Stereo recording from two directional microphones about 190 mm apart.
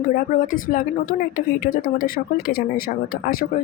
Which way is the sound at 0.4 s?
45° left (ahead or behind).